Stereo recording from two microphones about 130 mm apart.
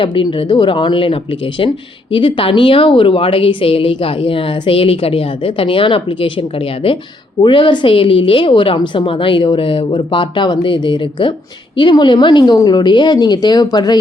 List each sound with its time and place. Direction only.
0.0 s a woman's voice: 40° left (ahead or behind)